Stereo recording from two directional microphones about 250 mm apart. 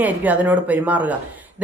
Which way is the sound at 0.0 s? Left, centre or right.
Centre.